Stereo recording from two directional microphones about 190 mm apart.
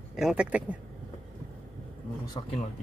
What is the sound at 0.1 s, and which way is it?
Speech, centre (ahead or behind).